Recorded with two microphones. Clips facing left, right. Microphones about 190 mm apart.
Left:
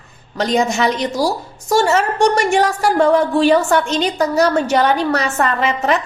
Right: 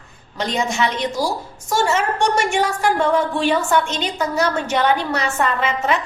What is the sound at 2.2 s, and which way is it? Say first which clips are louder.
A woman's voice: left 6 dB; 40° left (ahead or behind).